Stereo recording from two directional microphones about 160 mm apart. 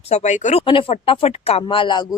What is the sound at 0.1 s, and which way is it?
Speech, 45° left (ahead or behind).